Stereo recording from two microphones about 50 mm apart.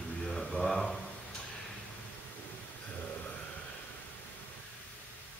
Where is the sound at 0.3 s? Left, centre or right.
Centre.